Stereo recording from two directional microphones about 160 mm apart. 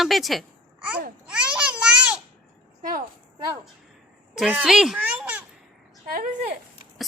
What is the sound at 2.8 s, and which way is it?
Speech, 60° right (ahead or behind).